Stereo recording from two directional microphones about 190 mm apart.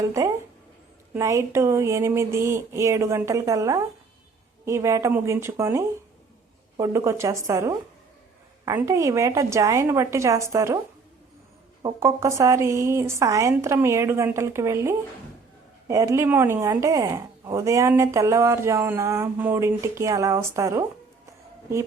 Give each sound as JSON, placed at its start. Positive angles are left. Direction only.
{"t": 0.0, "sound": "speech", "side_deg": -15}
{"t": 11.8, "sound": "speech", "side_deg": -20}